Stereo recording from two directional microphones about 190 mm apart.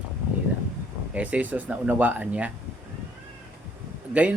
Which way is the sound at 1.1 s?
5° right (ahead or behind).